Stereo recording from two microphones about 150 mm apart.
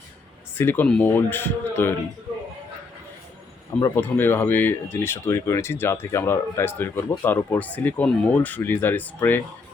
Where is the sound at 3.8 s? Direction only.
15° left (ahead or behind).